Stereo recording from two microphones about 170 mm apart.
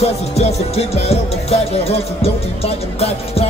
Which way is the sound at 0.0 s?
40° left (ahead or behind).